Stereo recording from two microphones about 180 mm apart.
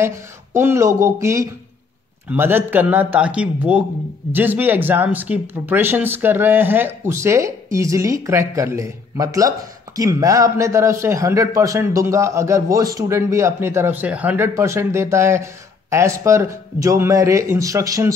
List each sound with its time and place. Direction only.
0.0 s speech: 15° right (ahead or behind)